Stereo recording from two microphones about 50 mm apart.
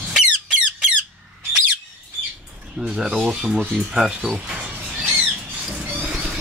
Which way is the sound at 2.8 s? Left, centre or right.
Centre.